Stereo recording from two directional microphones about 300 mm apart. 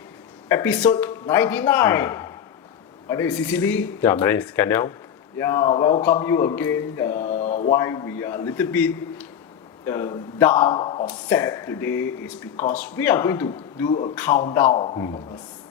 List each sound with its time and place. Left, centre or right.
0.4 s a man's voice: centre
7.1 s mantra: left
7.8 s a man's voice: centre
11.9 s speech: left
12.8 s a man's voice: centre